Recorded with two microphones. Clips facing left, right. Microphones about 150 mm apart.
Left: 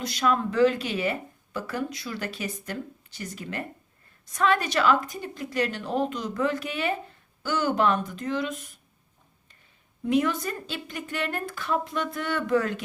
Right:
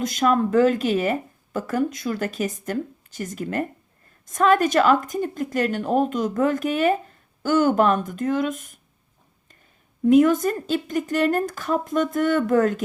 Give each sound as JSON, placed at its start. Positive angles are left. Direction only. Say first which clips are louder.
{"t": 0.0, "sound": "speech", "louder": "right 5 dB", "side_deg": -45}
{"t": 10.1, "sound": "speech", "louder": "right 9 dB", "side_deg": -45}